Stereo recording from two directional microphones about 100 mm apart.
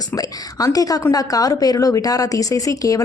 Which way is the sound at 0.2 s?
35° left (ahead or behind).